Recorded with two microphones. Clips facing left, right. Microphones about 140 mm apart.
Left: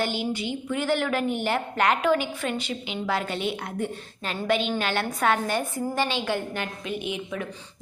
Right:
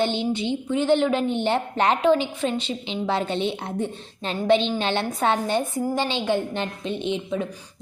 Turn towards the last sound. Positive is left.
turn(degrees=-25)  # may be behind; listen again after turning